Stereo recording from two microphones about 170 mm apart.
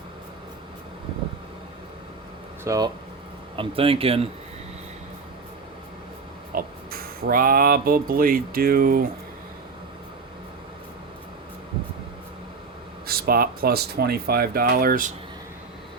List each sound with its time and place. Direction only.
2.6 s speech: 20° right (ahead or behind)
3.5 s speech: 30° right (ahead or behind)
6.5 s speech: 55° right (ahead or behind)
13.1 s speech: 60° right (ahead or behind)